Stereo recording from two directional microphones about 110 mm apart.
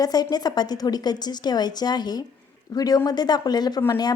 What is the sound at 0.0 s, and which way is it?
A woman's voice, 35° left (ahead or behind).